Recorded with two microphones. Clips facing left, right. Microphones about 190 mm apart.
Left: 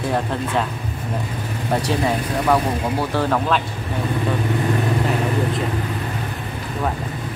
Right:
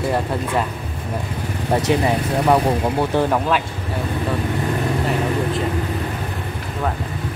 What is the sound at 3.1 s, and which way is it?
Speech, 15° right (ahead or behind).